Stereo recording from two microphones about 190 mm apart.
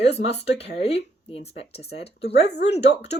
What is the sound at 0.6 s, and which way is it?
Speech, 30° left (ahead or behind).